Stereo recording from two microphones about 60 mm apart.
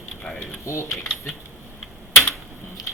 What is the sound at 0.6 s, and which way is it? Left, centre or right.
Speech, left.